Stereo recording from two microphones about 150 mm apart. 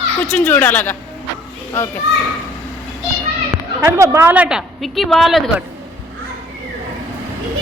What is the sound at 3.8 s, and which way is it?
A woman's voice, 20° right (ahead or behind).